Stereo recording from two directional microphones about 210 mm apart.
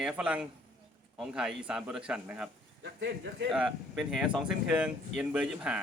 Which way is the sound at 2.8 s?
50° right (ahead or behind).